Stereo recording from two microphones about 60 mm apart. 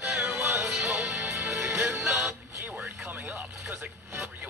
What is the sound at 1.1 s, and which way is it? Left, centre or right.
Music, right.